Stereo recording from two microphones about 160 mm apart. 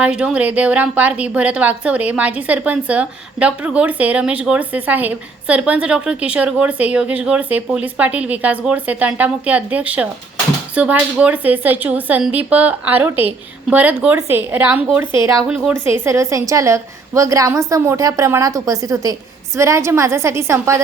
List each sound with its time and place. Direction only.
0.0 s a woman's voice: 5° right (ahead or behind)